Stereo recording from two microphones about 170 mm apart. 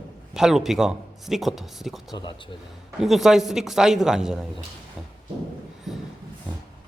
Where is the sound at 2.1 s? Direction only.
25° left (ahead or behind).